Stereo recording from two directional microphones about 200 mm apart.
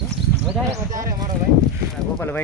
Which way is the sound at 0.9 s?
40° right (ahead or behind).